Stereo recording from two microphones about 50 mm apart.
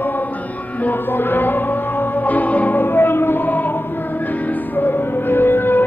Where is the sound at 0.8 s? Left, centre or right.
Left.